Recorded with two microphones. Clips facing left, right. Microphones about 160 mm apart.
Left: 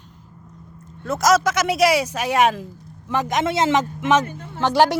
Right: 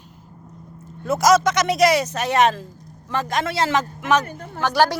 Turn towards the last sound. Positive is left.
turn(degrees=20)  # may be behind; listen again after turning